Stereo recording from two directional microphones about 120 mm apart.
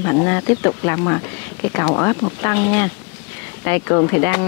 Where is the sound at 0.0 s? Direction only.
25° left (ahead or behind).